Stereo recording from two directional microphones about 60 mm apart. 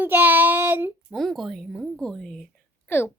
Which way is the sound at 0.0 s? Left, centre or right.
Right.